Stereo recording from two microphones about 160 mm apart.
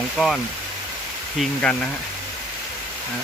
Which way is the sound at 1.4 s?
5° left (ahead or behind).